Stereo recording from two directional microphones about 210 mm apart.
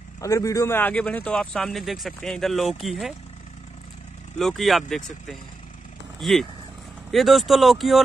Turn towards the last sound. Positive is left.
turn(degrees=0)  # may be behind; listen again after turning